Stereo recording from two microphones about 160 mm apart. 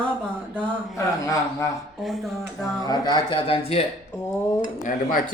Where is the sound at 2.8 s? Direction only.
25° left (ahead or behind).